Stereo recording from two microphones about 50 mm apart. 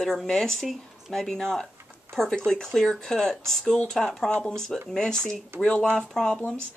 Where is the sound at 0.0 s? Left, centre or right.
Centre.